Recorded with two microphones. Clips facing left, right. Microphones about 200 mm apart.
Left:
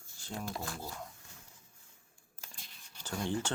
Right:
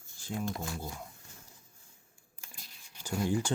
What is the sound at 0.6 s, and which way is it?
Speech, 15° right (ahead or behind).